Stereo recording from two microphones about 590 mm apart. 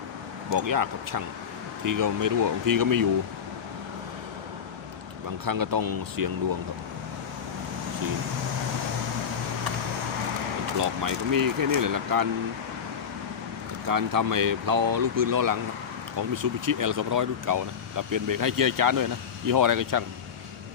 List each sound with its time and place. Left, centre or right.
0.5 s speech: right
5.5 s speech: right
10.8 s speech: right
13.8 s speech: right